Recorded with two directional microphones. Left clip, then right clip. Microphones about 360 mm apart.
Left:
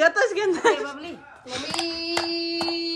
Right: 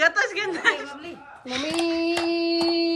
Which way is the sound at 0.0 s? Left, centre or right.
Centre.